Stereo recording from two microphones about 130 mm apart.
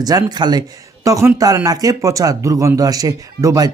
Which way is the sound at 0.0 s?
30° right (ahead or behind).